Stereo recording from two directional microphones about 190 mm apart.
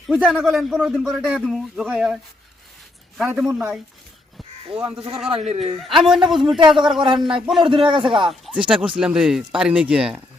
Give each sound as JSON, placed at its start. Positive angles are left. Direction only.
{"t": 0.1, "sound": "speech", "side_deg": -5}
{"t": 3.2, "sound": "speech", "side_deg": -10}
{"t": 4.7, "sound": "a man's voice", "side_deg": -30}
{"t": 5.8, "sound": "speech", "side_deg": 0}
{"t": 7.6, "sound": "a man's voice", "side_deg": -25}
{"t": 8.2, "sound": "speech", "side_deg": 0}